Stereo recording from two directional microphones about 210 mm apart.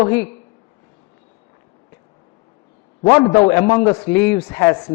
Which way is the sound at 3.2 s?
15° left (ahead or behind).